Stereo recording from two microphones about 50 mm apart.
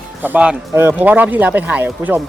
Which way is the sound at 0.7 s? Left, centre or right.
Right.